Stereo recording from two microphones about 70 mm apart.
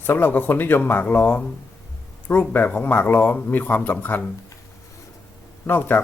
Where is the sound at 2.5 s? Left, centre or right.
Left.